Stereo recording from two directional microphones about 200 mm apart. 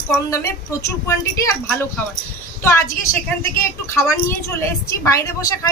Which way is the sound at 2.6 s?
15° left (ahead or behind).